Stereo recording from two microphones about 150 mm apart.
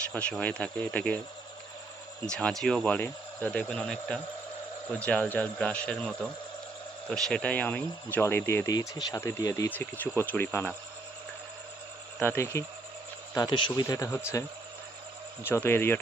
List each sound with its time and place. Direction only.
0.1 s speech: 10° left (ahead or behind)
2.2 s speech: 5° left (ahead or behind)
7.1 s speech: 5° left (ahead or behind)
12.2 s speech: 15° left (ahead or behind)
13.3 s speech: 30° left (ahead or behind)
15.4 s speech: 15° left (ahead or behind)